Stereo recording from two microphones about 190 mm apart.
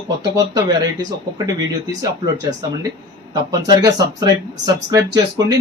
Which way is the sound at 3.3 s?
20° right (ahead or behind).